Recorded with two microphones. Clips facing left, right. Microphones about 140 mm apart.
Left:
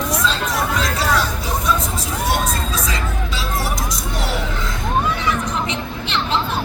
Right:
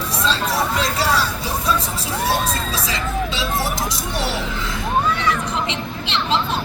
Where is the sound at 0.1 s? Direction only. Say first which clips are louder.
Even; 30° right (ahead or behind).